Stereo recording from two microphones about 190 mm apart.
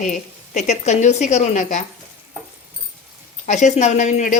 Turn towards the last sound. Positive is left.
turn(degrees=40)  # may be behind; listen again after turning